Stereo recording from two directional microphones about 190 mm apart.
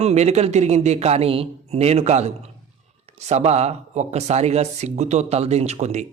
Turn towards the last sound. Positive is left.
turn(degrees=-35)  # may be behind; listen again after turning